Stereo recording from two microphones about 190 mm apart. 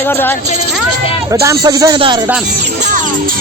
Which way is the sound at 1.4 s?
15° right (ahead or behind).